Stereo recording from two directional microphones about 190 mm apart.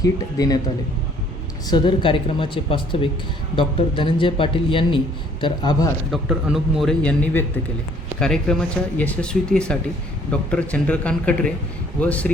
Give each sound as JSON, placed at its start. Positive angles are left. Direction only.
{"t": 0.0, "sound": "speech", "side_deg": 20}
{"t": 1.6, "sound": "speech", "side_deg": 25}
{"t": 6.1, "sound": "a man's voice", "side_deg": 0}